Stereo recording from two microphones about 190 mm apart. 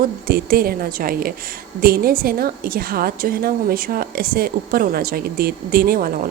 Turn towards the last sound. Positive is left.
turn(degrees=-50)  # may be behind; listen again after turning